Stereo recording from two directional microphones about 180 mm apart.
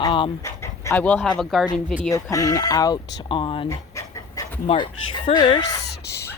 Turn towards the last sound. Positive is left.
turn(degrees=65)  # may be behind; listen again after turning